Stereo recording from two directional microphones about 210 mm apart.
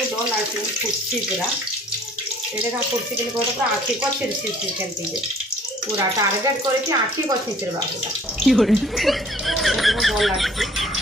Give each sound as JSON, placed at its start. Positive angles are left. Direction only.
{"t": 6.1, "sound": "speech", "side_deg": -15}
{"t": 8.4, "sound": "speech", "side_deg": 0}